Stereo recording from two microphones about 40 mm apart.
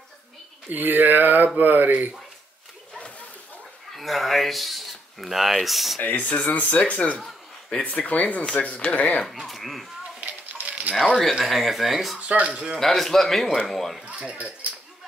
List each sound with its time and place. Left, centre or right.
0.7 s speech: right
3.9 s speech: centre
5.9 s speech: left
9.3 s speech: centre
10.2 s coin: right
11.4 s speech: centre
12.2 s speech: right
12.7 s a man's voice: centre
14.0 s speech: right